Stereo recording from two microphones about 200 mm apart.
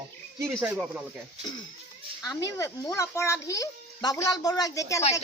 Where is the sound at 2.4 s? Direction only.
15° left (ahead or behind).